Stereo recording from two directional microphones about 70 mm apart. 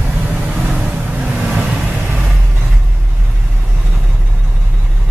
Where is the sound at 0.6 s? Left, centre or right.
Centre.